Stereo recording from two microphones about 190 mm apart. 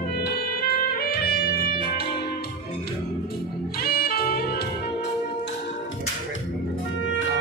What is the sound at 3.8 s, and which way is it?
Music, 50° left (ahead or behind).